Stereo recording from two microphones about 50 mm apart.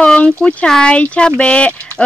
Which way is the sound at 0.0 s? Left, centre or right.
Left.